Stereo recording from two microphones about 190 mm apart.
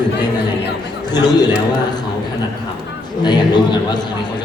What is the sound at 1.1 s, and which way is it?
Speech, 20° left (ahead or behind).